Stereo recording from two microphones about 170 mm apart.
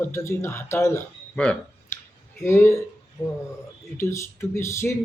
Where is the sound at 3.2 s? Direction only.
Centre (ahead or behind).